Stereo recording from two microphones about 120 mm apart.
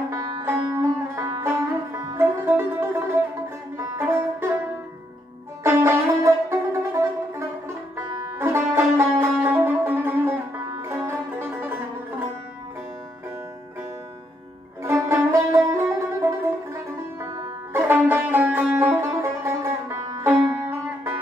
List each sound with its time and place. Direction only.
0.1 s music: 25° right (ahead or behind)
5.6 s music: 25° right (ahead or behind)
14.8 s music: 25° right (ahead or behind)